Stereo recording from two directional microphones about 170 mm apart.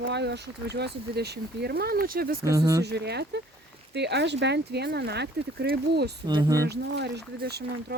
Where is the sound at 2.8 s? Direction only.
75° right (ahead or behind).